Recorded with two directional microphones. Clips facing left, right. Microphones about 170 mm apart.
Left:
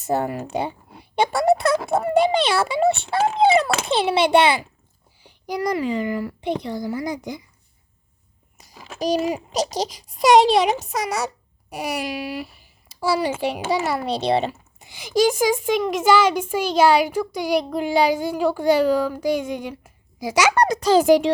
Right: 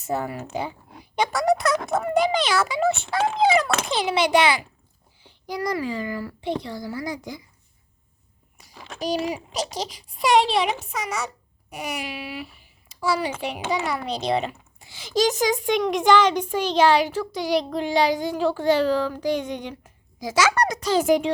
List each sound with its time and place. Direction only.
0.0 s a child's voice: 35° left (ahead or behind)
5.2 s a woman's voice: 15° left (ahead or behind)
9.0 s a child's voice: 40° left (ahead or behind)
14.8 s a child's voice: 15° left (ahead or behind)
20.6 s a child's voice: 30° left (ahead or behind)